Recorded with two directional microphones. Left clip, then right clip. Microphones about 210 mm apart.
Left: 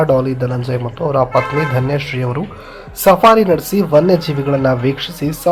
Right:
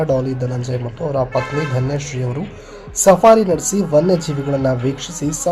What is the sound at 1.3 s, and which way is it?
Speech, 30° left (ahead or behind).